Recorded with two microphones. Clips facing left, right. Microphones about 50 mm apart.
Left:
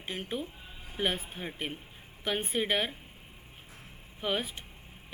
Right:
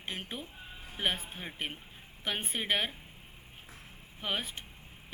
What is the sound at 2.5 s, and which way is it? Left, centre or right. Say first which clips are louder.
Speech: left 2 dB; centre.